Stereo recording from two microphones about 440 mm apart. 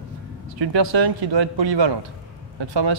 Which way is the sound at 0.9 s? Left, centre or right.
Right.